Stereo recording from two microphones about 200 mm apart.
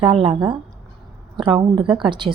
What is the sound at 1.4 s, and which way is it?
Speech, 25° right (ahead or behind).